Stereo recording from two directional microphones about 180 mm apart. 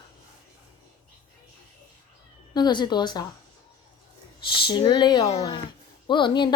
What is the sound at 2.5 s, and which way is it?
Speech, 25° left (ahead or behind).